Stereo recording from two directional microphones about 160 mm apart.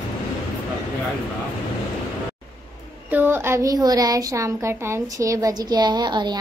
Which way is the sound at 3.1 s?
10° right (ahead or behind).